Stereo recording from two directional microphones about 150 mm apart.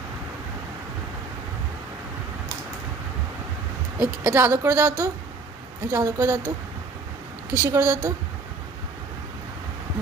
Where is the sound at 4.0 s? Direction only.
15° right (ahead or behind).